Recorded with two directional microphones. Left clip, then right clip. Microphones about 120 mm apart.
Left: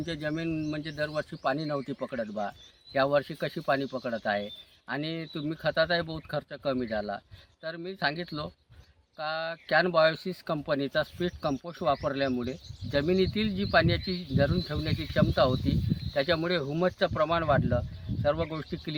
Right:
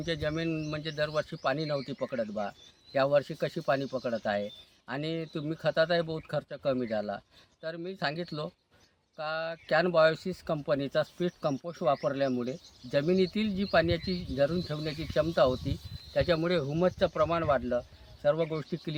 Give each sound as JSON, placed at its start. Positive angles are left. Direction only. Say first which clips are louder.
{"t": 0.0, "sound": "speech", "louder": "right 1 dB", "side_deg": -15}